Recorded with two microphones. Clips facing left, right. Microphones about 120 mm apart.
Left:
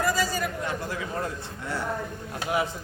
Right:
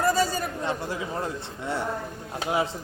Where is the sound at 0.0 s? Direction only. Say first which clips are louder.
Right 2 dB; 30° right (ahead or behind).